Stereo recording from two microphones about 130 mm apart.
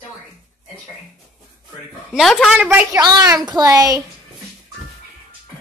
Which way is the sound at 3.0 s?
30° right (ahead or behind).